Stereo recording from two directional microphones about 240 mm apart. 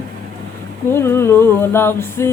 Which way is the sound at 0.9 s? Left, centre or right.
Centre.